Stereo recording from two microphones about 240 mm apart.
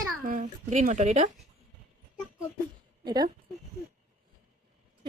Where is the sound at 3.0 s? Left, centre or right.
Centre.